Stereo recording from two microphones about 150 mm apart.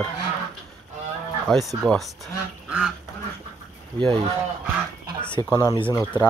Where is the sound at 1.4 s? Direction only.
Centre (ahead or behind).